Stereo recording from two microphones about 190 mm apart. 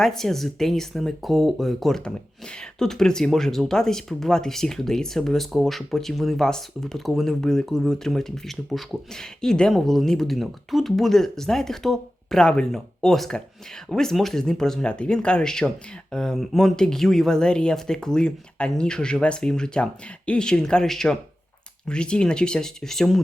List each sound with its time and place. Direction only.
0.0 s speech: centre (ahead or behind)